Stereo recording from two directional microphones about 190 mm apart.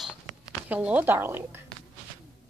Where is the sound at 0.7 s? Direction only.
10° right (ahead or behind).